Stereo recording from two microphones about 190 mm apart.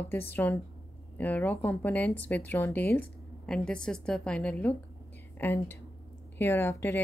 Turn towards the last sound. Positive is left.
turn(degrees=15)  # may be behind; listen again after turning